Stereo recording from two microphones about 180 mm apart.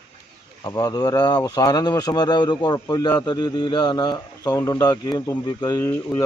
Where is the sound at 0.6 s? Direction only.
20° left (ahead or behind).